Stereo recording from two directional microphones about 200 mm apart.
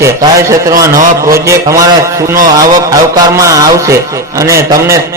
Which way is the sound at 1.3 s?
15° right (ahead or behind).